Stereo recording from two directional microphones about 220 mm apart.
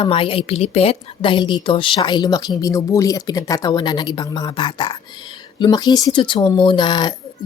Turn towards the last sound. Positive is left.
turn(degrees=20)  # may be behind; listen again after turning